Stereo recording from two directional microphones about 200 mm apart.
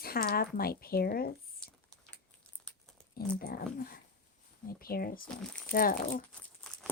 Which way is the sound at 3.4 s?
45° left (ahead or behind).